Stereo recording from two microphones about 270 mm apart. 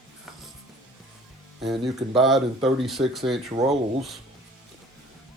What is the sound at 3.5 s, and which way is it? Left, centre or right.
Speech, right.